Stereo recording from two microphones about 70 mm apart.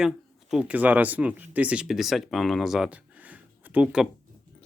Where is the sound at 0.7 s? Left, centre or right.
Right.